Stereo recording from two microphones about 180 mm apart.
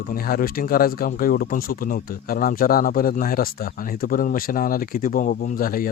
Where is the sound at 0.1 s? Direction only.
55° left (ahead or behind).